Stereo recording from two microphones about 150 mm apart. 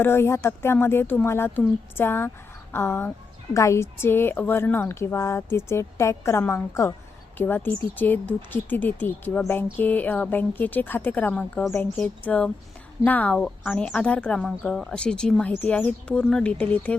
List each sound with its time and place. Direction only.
0.0 s a woman's voice: 15° left (ahead or behind)